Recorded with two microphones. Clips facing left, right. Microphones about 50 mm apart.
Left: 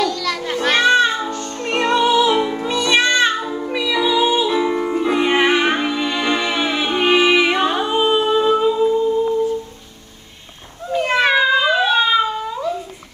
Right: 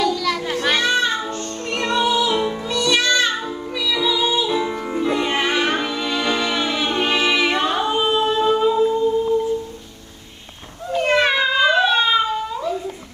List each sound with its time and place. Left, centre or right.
0.0 s music: centre
0.7 s music: left
3.3 s music: centre
3.6 s music: left; by 9.0 s centre
10.9 s a sound: centre